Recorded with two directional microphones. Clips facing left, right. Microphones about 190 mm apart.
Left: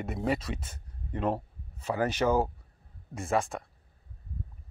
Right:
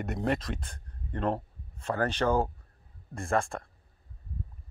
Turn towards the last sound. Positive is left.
turn(degrees=5)  # may be behind; listen again after turning